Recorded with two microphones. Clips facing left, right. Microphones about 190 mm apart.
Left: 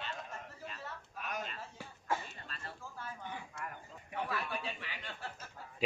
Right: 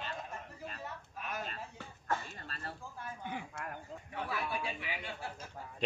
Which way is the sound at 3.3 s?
65° right (ahead or behind).